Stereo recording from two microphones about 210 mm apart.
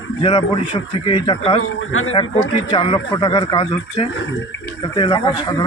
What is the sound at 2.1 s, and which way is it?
Speech, 20° left (ahead or behind).